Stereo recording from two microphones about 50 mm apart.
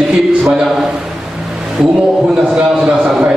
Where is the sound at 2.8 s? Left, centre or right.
Centre.